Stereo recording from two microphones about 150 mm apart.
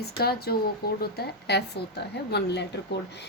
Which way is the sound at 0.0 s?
90° left.